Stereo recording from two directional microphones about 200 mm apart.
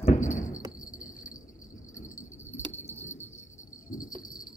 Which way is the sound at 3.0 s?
10° left (ahead or behind).